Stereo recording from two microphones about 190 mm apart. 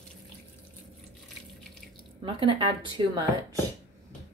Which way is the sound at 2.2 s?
25° right (ahead or behind).